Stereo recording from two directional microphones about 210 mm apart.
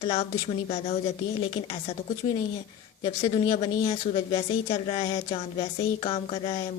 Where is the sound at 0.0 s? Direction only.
25° left (ahead or behind).